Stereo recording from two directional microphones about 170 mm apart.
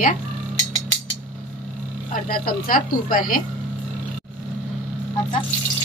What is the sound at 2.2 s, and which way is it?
Speech, 60° left (ahead or behind).